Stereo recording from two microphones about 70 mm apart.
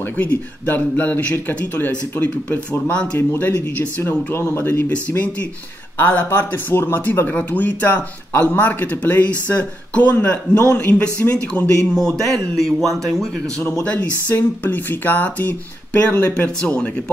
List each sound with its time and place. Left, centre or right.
0.2 s a man's voice: left; by 13.3 s centre
13.8 s speech: left